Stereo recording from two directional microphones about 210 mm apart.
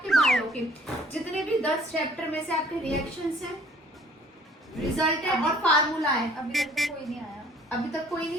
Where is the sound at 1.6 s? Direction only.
5° left (ahead or behind).